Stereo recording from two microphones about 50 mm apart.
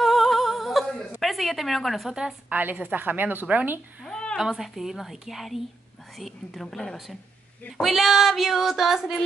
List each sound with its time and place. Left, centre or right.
0.0 s music: centre
1.2 s a woman's voice: centre
2.5 s a woman's voice: right
4.4 s female singing: centre
7.8 s female singing: centre